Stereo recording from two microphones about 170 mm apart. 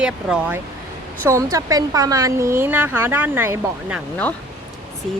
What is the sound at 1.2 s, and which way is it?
Speech, 20° right (ahead or behind).